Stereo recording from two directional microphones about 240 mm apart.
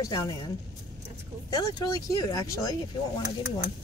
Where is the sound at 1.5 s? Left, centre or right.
Centre.